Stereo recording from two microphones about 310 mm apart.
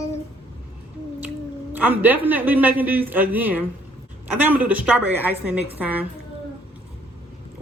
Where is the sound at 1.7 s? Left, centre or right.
Centre.